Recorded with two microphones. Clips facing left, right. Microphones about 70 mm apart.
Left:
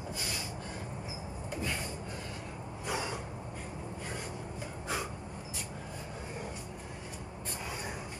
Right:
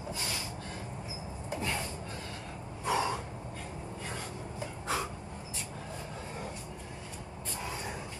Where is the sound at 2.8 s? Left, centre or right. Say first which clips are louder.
Right 6 dB; right.